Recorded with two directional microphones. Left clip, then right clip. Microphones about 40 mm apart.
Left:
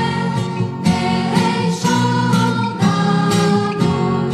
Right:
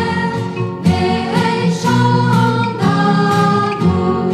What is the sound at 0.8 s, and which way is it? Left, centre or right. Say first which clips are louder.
Music: right 2 dB; right.